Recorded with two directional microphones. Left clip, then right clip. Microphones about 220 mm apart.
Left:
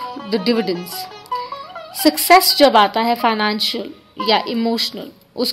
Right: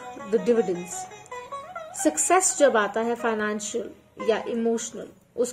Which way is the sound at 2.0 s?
40° left (ahead or behind).